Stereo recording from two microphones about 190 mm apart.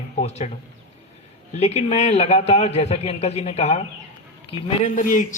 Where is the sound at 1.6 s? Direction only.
35° left (ahead or behind).